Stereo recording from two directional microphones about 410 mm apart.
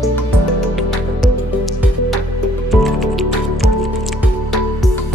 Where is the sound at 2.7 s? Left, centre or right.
Centre.